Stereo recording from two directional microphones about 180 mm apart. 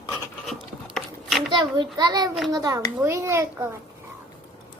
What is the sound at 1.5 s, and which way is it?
A child's voice, 25° right (ahead or behind).